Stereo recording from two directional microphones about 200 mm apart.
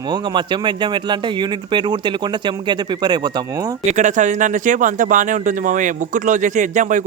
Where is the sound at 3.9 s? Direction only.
35° right (ahead or behind).